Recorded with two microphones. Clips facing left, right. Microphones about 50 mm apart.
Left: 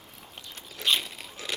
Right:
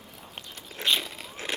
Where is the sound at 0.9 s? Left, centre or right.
Centre.